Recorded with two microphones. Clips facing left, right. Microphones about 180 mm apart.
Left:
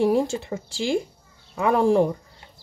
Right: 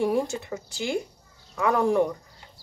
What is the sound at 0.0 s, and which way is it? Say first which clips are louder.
A woman's voice: left 4 dB; 30° left (ahead or behind).